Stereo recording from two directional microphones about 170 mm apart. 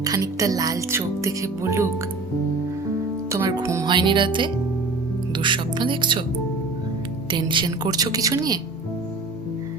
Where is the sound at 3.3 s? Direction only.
20° right (ahead or behind).